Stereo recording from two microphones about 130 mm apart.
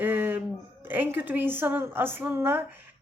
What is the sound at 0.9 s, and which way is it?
A woman's voice, 15° right (ahead or behind).